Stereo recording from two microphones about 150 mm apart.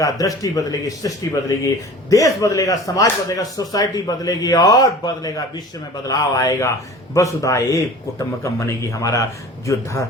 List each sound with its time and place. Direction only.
0.0 s speech: 25° left (ahead or behind)